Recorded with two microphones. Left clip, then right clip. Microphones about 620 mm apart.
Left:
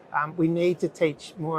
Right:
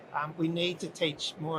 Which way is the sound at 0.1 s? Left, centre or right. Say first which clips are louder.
Left 7 dB; left.